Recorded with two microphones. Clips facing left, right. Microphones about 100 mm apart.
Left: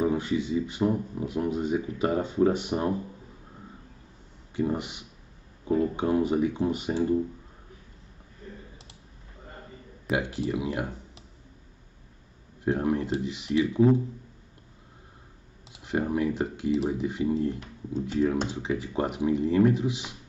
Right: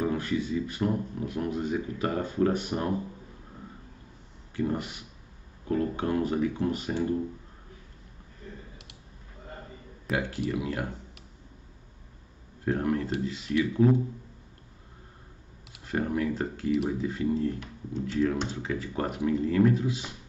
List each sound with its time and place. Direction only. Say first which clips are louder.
0.0 s speech: left 2 dB; 20° left (ahead or behind)
4.6 s speech: left 2 dB; 20° left (ahead or behind)
10.1 s speech: left 2 dB; centre (ahead or behind)
10.5 s speech: left 3 dB; 15° left (ahead or behind)
12.6 s speech: left 2 dB; 20° left (ahead or behind)
15.7 s speech: left 2 dB; 15° left (ahead or behind)